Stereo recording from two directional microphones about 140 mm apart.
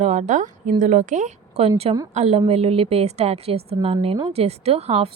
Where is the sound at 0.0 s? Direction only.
60° right (ahead or behind).